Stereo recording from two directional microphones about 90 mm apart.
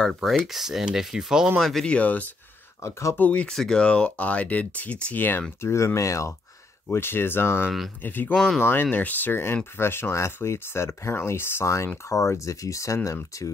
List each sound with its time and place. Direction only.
0.0 s speech: centre (ahead or behind)
1.9 s speech: 15° left (ahead or behind)
2.8 s speech: 35° left (ahead or behind)
3.2 s speech: 15° left (ahead or behind); by 6.3 s 35° left (ahead or behind)
6.9 s speech: 25° left (ahead or behind)